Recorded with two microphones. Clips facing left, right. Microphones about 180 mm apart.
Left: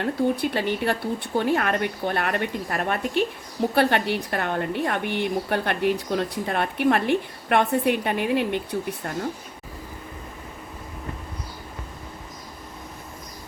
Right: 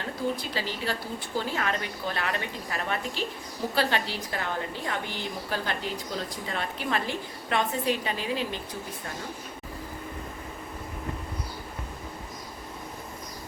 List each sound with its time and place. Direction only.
0.0 s a woman's voice: 60° left (ahead or behind)